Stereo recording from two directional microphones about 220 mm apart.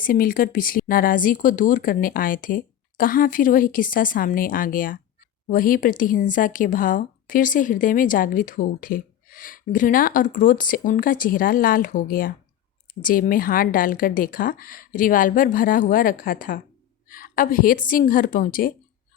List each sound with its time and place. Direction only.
0.0 s speech: 40° left (ahead or behind)